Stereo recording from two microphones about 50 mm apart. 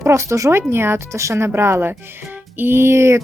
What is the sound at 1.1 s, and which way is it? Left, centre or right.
A woman's voice, right.